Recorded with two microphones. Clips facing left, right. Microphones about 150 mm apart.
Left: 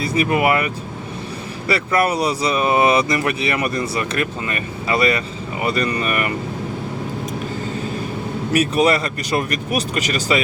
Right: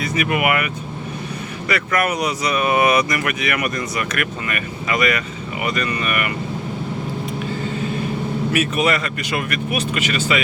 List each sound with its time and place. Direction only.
0.0 s speech: 30° left (ahead or behind)
8.5 s speech: 35° left (ahead or behind)